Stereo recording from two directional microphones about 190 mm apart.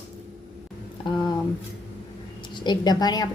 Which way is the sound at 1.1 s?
25° left (ahead or behind).